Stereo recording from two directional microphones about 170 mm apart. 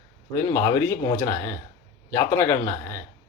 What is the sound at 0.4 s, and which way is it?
Speech, 20° left (ahead or behind).